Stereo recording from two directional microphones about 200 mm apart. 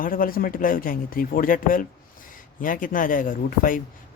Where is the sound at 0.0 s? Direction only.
45° left (ahead or behind).